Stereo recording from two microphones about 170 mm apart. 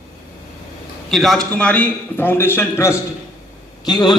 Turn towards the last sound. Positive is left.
turn(degrees=25)  # may be behind; listen again after turning